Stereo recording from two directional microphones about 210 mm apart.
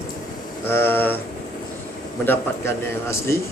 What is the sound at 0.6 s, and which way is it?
Speech, 10° left (ahead or behind).